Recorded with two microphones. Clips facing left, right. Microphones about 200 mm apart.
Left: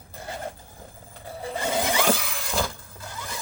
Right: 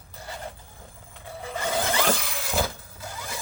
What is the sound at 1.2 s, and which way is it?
Vehicle, 35° left (ahead or behind).